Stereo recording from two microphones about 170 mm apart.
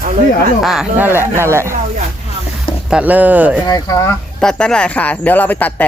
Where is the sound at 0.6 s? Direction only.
Centre (ahead or behind).